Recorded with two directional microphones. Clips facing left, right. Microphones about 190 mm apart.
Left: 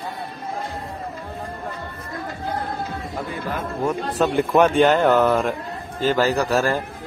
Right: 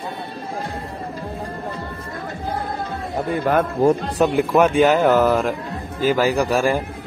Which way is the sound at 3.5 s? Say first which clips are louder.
Right 12 dB; 70° right (ahead or behind).